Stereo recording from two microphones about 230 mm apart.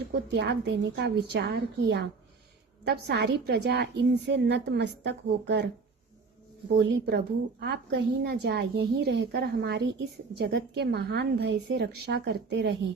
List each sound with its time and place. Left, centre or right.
0.3 s a woman's voice: right
6.7 s a woman's voice: right